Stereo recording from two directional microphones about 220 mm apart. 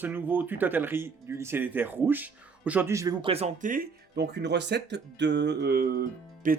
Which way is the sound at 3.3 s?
30° right (ahead or behind).